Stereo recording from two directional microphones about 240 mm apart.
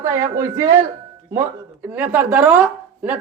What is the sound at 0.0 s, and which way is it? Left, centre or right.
Speech, centre.